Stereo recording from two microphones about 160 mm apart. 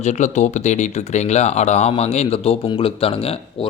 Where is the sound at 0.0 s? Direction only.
45° left (ahead or behind).